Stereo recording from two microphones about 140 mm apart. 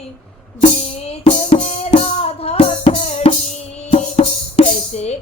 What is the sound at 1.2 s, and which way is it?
Music, 55° left (ahead or behind).